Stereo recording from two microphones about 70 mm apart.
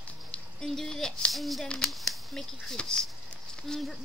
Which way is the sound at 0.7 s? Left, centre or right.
Centre.